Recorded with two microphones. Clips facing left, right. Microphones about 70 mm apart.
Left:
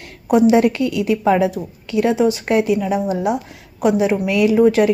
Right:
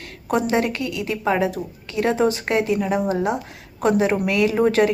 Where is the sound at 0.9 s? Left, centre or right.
Right.